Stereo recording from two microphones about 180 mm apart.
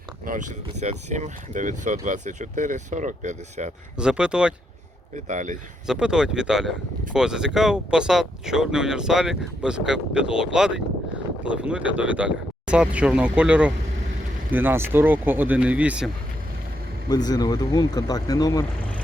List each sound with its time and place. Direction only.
0.3 s speech: 45° right (ahead or behind)
3.9 s speech: 5° right (ahead or behind)
5.1 s speech: 45° right (ahead or behind)
5.8 s speech: 5° right (ahead or behind)
17.1 s speech: 20° left (ahead or behind)